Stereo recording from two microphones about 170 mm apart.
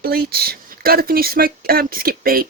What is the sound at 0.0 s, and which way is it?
Speech, 65° right (ahead or behind).